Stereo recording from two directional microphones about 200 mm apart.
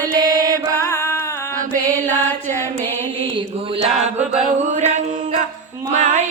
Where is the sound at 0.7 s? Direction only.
10° left (ahead or behind).